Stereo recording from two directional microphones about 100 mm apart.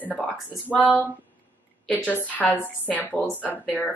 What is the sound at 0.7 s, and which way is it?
Speech, 15° left (ahead or behind).